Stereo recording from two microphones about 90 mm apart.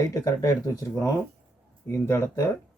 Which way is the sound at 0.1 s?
40° left (ahead or behind).